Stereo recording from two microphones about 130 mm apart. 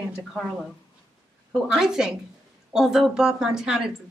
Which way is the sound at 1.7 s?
5° right (ahead or behind).